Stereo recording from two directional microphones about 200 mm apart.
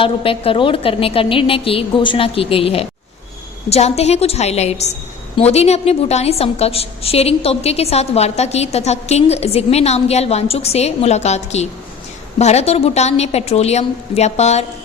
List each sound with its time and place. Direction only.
0.0 s a woman's voice: 25° left (ahead or behind)